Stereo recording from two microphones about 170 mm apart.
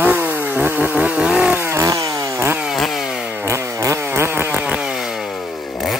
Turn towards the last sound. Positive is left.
turn(degrees=0)  # may be behind; listen again after turning